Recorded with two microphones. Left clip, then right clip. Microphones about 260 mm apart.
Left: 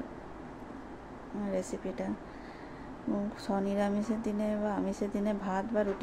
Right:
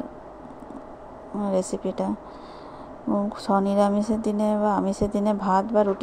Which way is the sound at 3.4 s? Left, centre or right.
Right.